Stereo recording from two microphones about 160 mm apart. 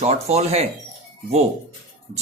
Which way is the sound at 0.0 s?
40° right (ahead or behind).